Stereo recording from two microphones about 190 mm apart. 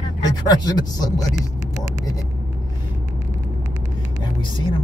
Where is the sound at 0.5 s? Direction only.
20° left (ahead or behind).